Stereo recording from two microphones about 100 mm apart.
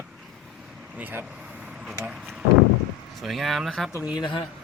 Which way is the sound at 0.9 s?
15° right (ahead or behind).